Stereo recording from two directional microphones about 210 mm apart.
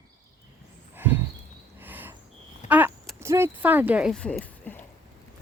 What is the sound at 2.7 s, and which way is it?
Speech, 10° right (ahead or behind).